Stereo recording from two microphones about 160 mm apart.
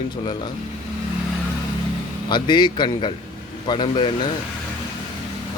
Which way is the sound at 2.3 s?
30° left (ahead or behind).